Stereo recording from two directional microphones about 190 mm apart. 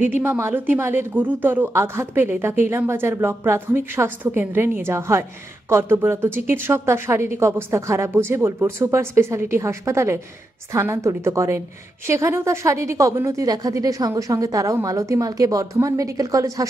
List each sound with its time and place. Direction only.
0.0 s speech: 10° right (ahead or behind)